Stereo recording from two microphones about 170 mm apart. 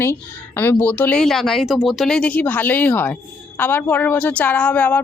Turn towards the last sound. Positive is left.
turn(degrees=10)  # may be behind; listen again after turning